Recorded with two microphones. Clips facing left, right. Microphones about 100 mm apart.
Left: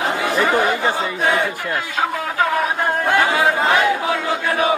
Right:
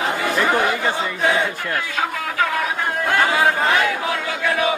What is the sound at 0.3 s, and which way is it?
Speech, centre (ahead or behind).